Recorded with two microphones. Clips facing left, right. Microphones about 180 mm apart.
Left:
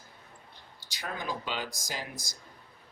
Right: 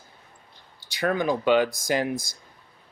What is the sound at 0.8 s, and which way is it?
Speech, 60° right (ahead or behind).